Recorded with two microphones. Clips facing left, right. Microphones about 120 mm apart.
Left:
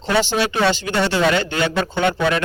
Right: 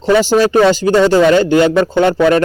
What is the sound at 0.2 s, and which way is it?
Speech, 40° right (ahead or behind).